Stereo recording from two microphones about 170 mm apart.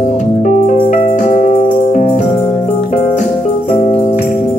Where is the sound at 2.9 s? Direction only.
45° left (ahead or behind).